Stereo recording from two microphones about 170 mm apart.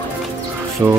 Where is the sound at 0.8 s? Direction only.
15° right (ahead or behind).